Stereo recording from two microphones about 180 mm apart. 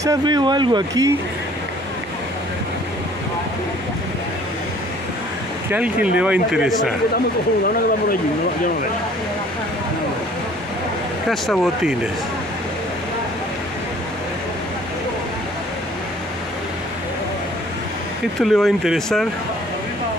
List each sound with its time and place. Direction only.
0.0 s speech: 20° right (ahead or behind)
5.7 s speech: 5° right (ahead or behind)
11.2 s speech: centre (ahead or behind)
18.4 s speech: centre (ahead or behind)